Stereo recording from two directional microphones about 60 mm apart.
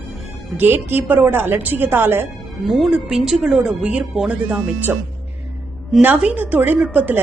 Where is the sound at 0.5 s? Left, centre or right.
Right.